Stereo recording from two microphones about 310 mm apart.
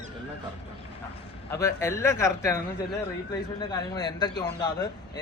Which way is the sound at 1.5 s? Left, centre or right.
Centre.